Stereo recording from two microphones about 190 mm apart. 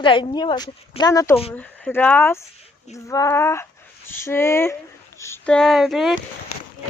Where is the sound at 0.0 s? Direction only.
25° left (ahead or behind).